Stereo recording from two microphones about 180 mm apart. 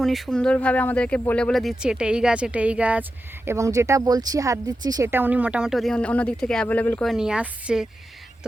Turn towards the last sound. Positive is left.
turn(degrees=-5)  # may be behind; listen again after turning